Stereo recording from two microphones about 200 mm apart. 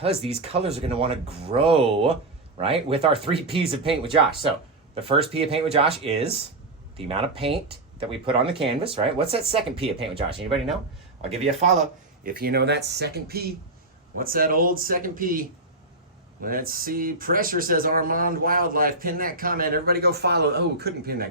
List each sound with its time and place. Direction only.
0.0 s speech: 30° right (ahead or behind); by 21.2 s 50° right (ahead or behind)